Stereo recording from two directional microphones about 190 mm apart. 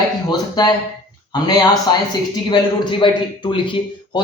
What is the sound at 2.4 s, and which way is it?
Speech, 25° left (ahead or behind).